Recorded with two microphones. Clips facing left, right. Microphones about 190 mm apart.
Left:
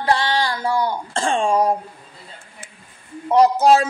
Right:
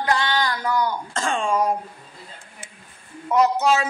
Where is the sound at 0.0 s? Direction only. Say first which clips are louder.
Left 3 dB; 30° left (ahead or behind).